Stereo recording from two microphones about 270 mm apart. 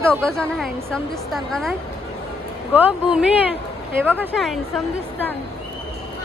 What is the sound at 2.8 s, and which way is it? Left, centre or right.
A woman's voice, centre.